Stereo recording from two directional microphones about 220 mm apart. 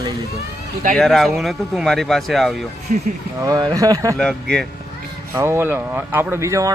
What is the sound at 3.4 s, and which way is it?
Speech, 15° right (ahead or behind).